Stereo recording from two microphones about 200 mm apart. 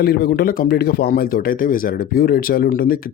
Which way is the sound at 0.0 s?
50° left (ahead or behind).